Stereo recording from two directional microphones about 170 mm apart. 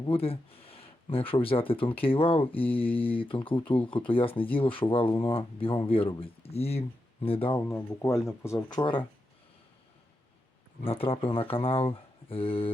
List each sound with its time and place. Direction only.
0.0 s speech: 35° left (ahead or behind)
7.7 s speech: 15° left (ahead or behind)
10.8 s speech: 35° left (ahead or behind)